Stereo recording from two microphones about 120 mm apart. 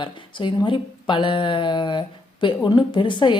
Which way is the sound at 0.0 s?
40° left (ahead or behind).